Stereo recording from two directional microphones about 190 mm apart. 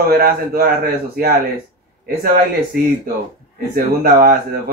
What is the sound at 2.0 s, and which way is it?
Speech, 50° right (ahead or behind).